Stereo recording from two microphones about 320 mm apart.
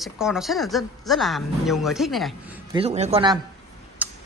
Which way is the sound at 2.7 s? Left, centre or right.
Centre.